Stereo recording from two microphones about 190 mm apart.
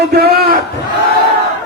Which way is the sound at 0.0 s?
55° right (ahead or behind).